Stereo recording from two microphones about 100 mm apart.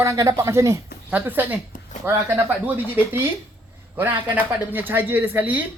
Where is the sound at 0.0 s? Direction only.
35° right (ahead or behind).